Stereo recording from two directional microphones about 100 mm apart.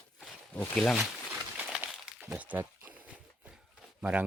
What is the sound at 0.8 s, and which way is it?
Speech, 5° left (ahead or behind).